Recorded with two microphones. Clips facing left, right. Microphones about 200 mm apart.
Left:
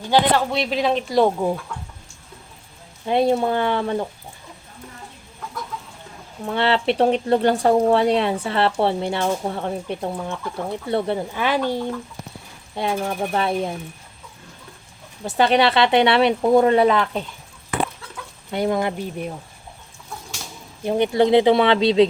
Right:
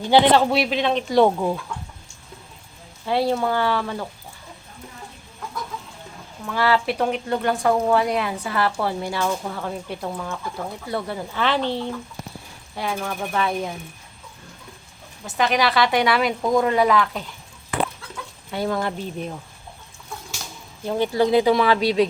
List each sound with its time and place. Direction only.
0.1 s a man's voice: 15° right (ahead or behind)
0.6 s speech: 5° left (ahead or behind)
3.1 s speech: 20° left (ahead or behind)
6.4 s speech: 25° left (ahead or behind)
11.3 s speech: 10° left (ahead or behind)
12.7 s speech: 25° left (ahead or behind)
15.4 s speech: 30° left (ahead or behind)
18.5 s speech: 20° left (ahead or behind)
20.9 s speech: 25° left (ahead or behind)